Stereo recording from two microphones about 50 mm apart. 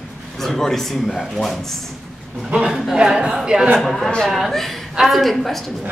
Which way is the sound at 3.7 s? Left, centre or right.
Centre.